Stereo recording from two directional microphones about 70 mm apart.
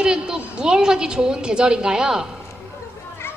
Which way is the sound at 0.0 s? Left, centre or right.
Centre.